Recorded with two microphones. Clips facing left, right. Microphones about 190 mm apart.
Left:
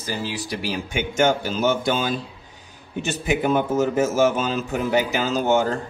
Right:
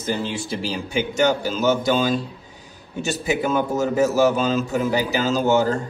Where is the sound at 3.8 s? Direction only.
40° right (ahead or behind).